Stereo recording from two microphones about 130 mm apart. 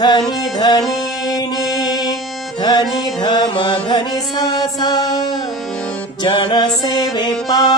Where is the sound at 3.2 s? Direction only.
35° left (ahead or behind).